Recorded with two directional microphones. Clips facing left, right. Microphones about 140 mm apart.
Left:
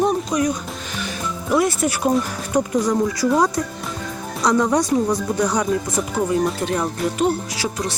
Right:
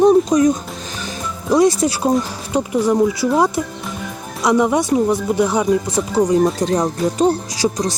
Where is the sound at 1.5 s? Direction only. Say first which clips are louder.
Right 5 dB; 35° right (ahead or behind).